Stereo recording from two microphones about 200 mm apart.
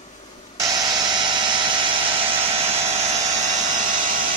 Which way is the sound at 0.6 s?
20° right (ahead or behind).